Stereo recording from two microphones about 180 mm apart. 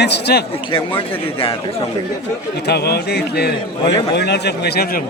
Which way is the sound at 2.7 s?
65° left (ahead or behind).